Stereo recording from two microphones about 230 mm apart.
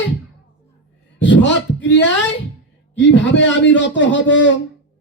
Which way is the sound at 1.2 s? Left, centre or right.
Left.